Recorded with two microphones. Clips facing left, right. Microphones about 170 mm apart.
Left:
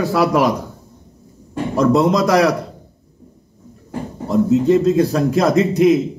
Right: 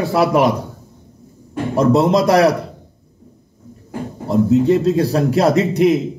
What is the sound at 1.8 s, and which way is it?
Speech, 30° right (ahead or behind).